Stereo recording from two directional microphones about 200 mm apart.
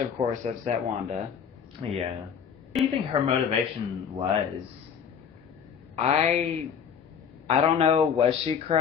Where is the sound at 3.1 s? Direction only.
30° right (ahead or behind).